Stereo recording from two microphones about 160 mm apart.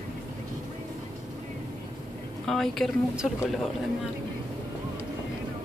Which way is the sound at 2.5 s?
Centre (ahead or behind).